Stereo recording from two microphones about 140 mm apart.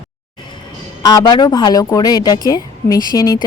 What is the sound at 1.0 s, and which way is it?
A woman's voice, 30° left (ahead or behind).